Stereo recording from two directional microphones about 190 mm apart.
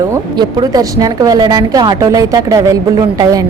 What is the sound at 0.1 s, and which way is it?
A woman's voice, 20° right (ahead or behind).